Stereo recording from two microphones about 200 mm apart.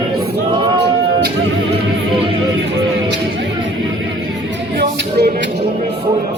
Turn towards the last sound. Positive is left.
turn(degrees=-55)  # may be behind; listen again after turning